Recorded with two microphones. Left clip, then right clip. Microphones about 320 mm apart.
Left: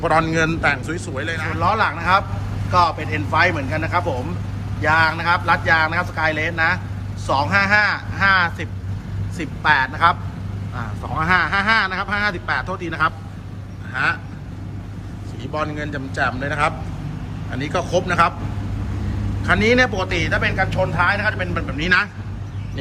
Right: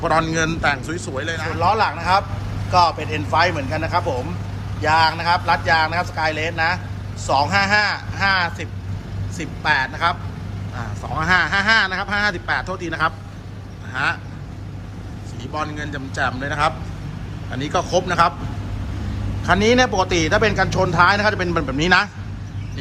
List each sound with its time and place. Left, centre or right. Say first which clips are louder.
0.0 s a man's voice: left 1 dB; centre
15.5 s a man's voice: left 2 dB; centre
19.4 s a man's voice: even; centre